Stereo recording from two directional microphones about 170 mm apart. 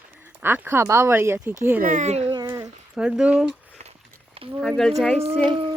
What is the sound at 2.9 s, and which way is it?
Speech, 5° right (ahead or behind).